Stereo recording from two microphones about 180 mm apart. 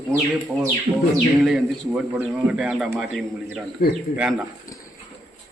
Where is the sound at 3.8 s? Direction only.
55° left (ahead or behind).